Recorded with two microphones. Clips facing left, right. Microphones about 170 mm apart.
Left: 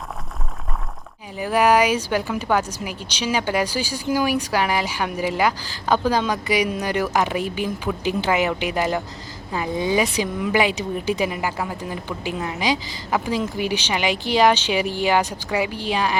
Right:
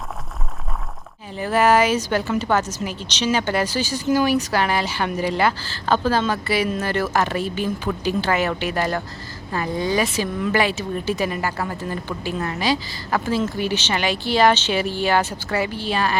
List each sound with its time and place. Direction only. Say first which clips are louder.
1.4 s speech: even; 10° left (ahead or behind)